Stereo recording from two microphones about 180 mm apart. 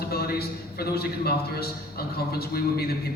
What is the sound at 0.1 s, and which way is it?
A man's voice, 60° left (ahead or behind).